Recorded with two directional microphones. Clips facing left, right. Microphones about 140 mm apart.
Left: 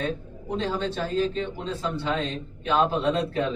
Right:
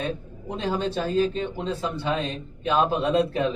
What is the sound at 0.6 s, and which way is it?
A man's voice, 15° right (ahead or behind).